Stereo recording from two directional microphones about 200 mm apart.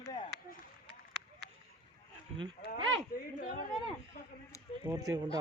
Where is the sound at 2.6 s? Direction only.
50° left (ahead or behind).